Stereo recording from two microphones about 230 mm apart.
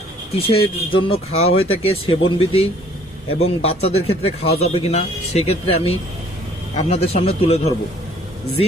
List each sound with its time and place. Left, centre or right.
0.3 s speech: left